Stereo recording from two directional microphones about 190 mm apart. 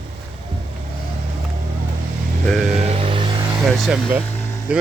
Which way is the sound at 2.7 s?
30° right (ahead or behind).